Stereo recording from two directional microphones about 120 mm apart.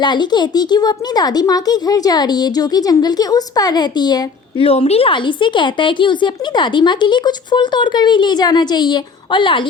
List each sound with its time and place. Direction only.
0.0 s speech: 40° left (ahead or behind)
4.6 s speech: 55° left (ahead or behind)